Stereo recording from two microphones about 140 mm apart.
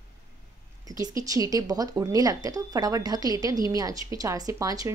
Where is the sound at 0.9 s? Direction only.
25° right (ahead or behind).